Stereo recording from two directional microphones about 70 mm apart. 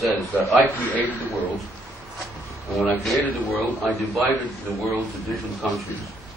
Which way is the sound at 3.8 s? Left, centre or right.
Centre.